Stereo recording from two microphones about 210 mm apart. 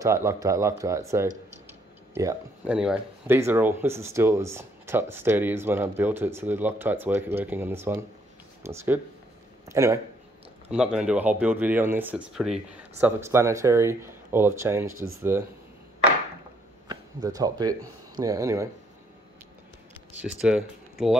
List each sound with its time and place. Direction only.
0.0 s speech: 15° right (ahead or behind)
16.8 s speech: 20° right (ahead or behind)
20.2 s speech: 5° right (ahead or behind)